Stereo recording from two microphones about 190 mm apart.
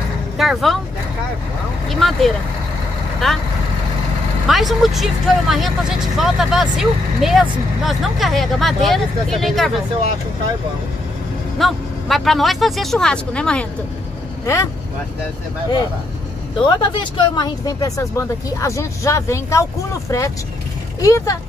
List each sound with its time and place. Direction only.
0.4 s speech: centre (ahead or behind)
1.9 s speech: centre (ahead or behind)
4.5 s speech: centre (ahead or behind)
11.5 s speech: centre (ahead or behind)
16.6 s speech: 25° left (ahead or behind)
21.0 s speech: 15° left (ahead or behind)